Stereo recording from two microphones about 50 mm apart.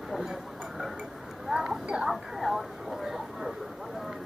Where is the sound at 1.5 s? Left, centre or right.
Centre.